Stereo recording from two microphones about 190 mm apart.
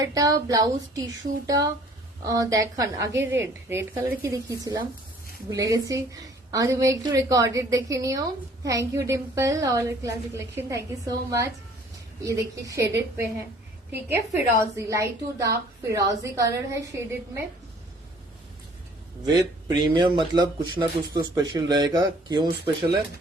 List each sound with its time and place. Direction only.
0.0 s a woman's voice: 20° right (ahead or behind)
13.9 s a woman's voice: 10° right (ahead or behind)
19.2 s speech: 20° right (ahead or behind)